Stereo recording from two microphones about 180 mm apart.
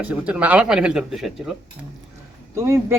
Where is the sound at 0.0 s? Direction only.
5° right (ahead or behind).